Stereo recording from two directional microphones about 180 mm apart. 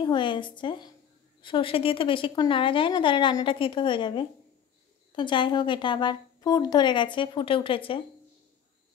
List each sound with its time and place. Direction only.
0.0 s a woman's voice: 25° left (ahead or behind)